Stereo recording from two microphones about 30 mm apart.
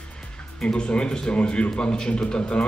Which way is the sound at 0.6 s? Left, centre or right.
Left.